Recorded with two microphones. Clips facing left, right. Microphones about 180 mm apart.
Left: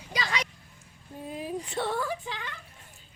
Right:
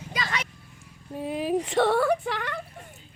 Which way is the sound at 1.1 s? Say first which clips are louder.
Right 8 dB; 80° right.